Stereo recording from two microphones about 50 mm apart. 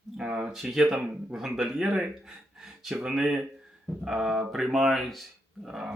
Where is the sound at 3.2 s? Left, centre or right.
Right.